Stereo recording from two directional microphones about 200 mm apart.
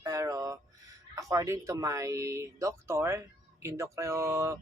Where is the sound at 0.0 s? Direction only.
15° right (ahead or behind).